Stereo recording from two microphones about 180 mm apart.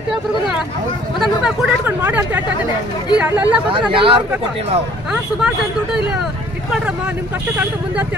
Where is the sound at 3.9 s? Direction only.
30° right (ahead or behind).